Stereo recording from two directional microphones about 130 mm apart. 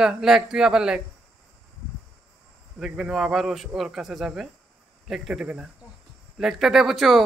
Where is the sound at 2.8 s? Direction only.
5° right (ahead or behind).